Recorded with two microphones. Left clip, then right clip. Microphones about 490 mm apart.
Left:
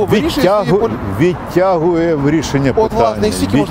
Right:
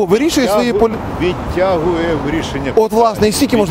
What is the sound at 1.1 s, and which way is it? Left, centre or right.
Speech, left.